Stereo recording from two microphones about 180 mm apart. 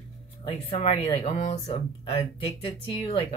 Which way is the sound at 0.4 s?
35° left (ahead or behind).